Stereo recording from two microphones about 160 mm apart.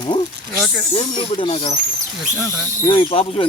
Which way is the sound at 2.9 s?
35° left (ahead or behind).